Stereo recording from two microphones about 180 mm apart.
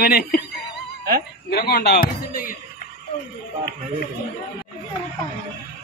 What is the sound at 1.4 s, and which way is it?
Speech, 60° left (ahead or behind).